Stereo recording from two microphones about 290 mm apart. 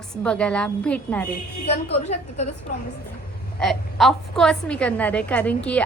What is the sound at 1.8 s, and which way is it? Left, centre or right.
Speech, left.